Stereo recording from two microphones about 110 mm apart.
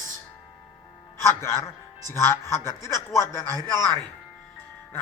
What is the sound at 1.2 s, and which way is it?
A man's voice, 25° left (ahead or behind).